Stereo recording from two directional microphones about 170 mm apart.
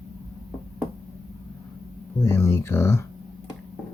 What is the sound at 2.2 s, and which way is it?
Speech, 15° left (ahead or behind).